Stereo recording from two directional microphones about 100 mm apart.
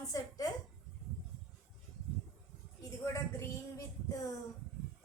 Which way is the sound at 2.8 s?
30° left (ahead or behind).